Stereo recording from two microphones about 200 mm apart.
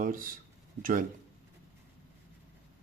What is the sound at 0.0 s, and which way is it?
Speech, 45° right (ahead or behind).